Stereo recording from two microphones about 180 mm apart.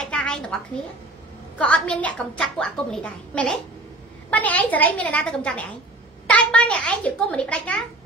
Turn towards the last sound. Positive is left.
turn(degrees=5)  # may be behind; listen again after turning